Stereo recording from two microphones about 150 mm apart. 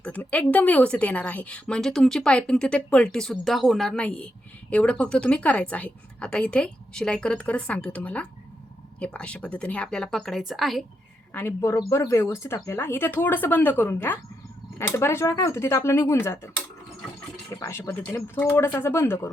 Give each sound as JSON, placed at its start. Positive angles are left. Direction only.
{"t": 0.0, "sound": "a woman's voice", "side_deg": 10}
{"t": 11.3, "sound": "a woman's voice", "side_deg": 15}
{"t": 17.5, "sound": "a woman's voice", "side_deg": 20}